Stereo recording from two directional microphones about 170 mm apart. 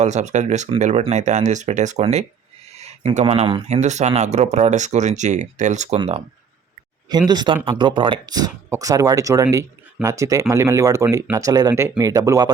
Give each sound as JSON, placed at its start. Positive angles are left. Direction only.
{"t": 0.0, "sound": "speech", "side_deg": -40}